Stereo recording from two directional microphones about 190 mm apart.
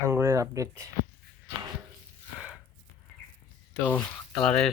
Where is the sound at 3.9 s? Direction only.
5° left (ahead or behind).